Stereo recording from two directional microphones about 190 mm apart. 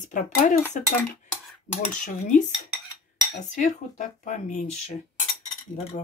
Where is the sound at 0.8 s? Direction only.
40° left (ahead or behind).